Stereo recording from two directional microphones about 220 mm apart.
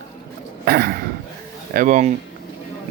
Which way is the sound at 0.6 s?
45° right (ahead or behind).